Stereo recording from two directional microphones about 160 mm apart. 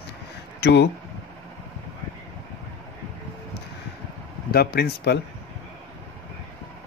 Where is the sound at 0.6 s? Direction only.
90° left.